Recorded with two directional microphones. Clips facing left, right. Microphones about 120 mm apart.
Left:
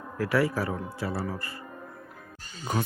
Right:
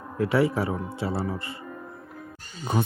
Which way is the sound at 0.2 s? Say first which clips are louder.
Right 3 dB; 25° right (ahead or behind).